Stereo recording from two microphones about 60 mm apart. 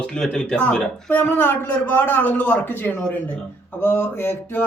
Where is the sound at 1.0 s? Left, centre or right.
Left.